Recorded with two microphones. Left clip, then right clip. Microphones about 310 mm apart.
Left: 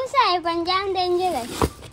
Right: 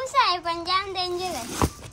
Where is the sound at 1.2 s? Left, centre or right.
Centre.